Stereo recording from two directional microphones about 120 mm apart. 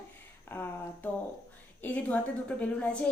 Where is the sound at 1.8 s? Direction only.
15° left (ahead or behind).